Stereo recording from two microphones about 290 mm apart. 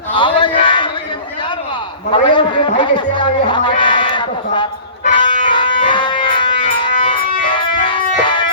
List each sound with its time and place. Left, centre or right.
0.2 s a sound: centre
2.1 s speech: centre
5.0 s music: centre